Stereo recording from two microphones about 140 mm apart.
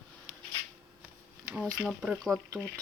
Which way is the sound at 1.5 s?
5° left (ahead or behind).